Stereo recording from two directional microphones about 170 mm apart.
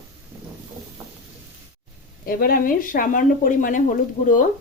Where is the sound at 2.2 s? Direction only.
60° left (ahead or behind).